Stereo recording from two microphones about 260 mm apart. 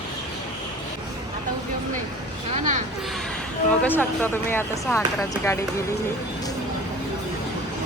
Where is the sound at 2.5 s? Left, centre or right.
Right.